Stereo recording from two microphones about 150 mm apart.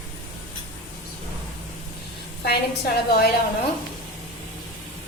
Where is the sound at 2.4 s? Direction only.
90° left.